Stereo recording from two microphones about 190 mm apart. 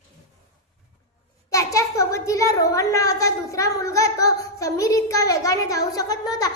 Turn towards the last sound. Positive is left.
turn(degrees=20)  # may be behind; listen again after turning